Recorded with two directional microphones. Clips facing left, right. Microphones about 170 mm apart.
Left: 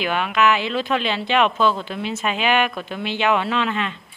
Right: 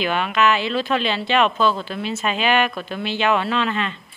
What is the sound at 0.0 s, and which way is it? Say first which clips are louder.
Speech: even; 10° left (ahead or behind).